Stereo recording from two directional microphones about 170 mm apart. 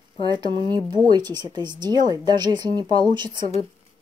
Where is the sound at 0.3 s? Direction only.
25° right (ahead or behind).